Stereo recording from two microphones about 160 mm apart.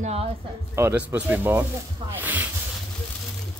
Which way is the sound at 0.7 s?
10° right (ahead or behind).